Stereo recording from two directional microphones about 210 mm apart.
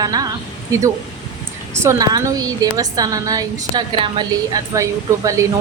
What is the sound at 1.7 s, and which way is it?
A woman's voice, 15° right (ahead or behind).